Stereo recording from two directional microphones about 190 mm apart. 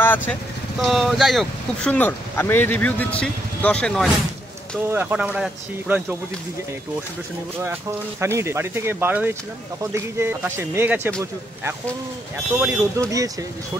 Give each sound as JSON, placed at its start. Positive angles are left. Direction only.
{"t": 0.0, "sound": "speech", "side_deg": 10}
{"t": 0.8, "sound": "speech", "side_deg": 0}
{"t": 4.8, "sound": "speech", "side_deg": -10}
{"t": 7.6, "sound": "speech", "side_deg": -15}
{"t": 12.5, "sound": "speech", "side_deg": -10}